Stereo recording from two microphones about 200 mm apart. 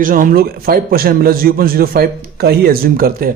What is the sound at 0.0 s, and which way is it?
A man's voice, 45° right (ahead or behind).